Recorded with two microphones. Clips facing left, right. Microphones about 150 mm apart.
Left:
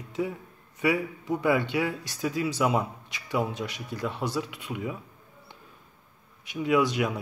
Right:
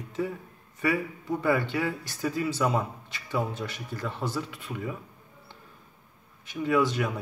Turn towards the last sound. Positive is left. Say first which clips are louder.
# left 1 dB
turn(degrees=15)  # may be behind; listen again after turning